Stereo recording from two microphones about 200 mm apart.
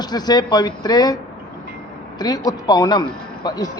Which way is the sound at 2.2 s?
20° left (ahead or behind).